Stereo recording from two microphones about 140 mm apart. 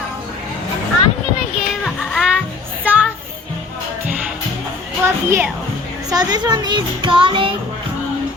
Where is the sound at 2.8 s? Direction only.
10° right (ahead or behind).